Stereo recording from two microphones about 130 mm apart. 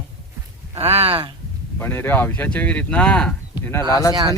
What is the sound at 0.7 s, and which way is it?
Speech, 50° right (ahead or behind).